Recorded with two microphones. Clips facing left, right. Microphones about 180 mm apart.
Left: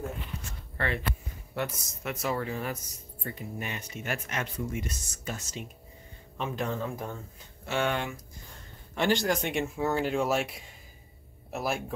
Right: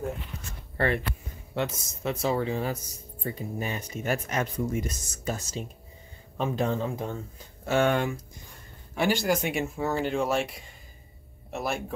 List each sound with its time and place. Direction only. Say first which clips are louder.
0.7 s speech: right 6 dB; 45° right (ahead or behind)
1.5 s speech: right 3 dB; 25° right (ahead or behind)
7.6 s speech: right 6 dB; 45° right (ahead or behind)
8.9 s speech: right 1 dB; 10° right (ahead or behind)